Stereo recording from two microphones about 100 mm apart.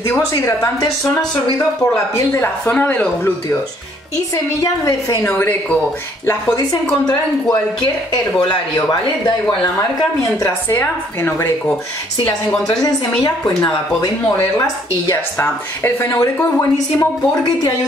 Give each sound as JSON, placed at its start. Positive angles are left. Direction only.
{"t": 0.4, "sound": "a woman's voice", "side_deg": 35}
{"t": 2.3, "sound": "speech", "side_deg": 15}
{"t": 5.2, "sound": "speech", "side_deg": 15}
{"t": 6.2, "sound": "a woman's voice", "side_deg": 40}
{"t": 10.4, "sound": "speech", "side_deg": 25}
{"t": 12.6, "sound": "a woman's voice", "side_deg": 35}
{"t": 16.7, "sound": "a woman's voice", "side_deg": 35}